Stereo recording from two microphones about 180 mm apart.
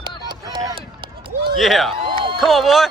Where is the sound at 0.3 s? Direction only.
25° right (ahead or behind).